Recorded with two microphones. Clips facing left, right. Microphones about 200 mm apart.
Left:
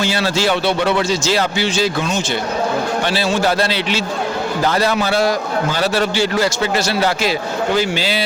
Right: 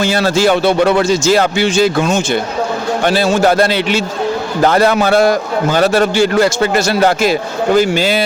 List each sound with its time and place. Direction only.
0.0 s a man's voice: 45° right (ahead or behind)